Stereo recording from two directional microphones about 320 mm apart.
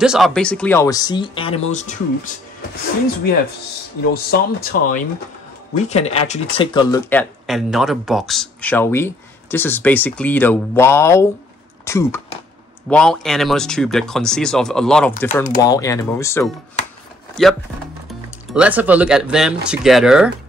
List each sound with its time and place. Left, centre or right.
0.0 s speech: centre; by 2.3 s left
4.1 s speech: left; by 20.2 s centre